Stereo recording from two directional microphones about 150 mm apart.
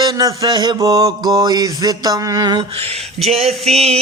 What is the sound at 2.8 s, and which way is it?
Speech, 45° right (ahead or behind).